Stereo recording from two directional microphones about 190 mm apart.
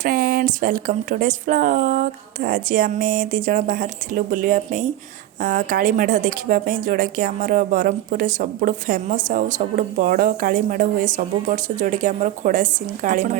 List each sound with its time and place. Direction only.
0.0 s speech: 50° right (ahead or behind)